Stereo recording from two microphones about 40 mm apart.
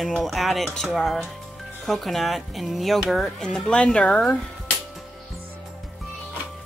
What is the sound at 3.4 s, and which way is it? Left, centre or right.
Speech, centre.